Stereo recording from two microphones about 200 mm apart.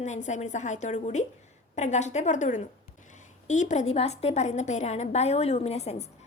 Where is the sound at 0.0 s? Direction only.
35° left (ahead or behind).